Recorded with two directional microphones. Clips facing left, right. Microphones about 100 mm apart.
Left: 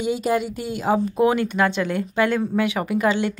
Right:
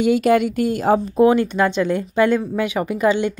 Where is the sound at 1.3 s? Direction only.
25° right (ahead or behind).